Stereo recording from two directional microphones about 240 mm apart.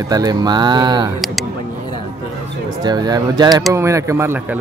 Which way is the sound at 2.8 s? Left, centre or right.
Centre.